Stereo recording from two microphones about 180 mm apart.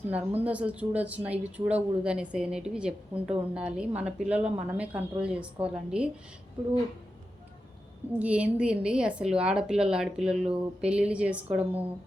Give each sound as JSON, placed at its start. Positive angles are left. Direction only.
{"t": 0.1, "sound": "speech", "side_deg": -10}
{"t": 8.2, "sound": "a woman's voice", "side_deg": -5}